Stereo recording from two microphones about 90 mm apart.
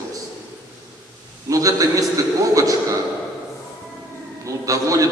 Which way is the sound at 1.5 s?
40° right (ahead or behind).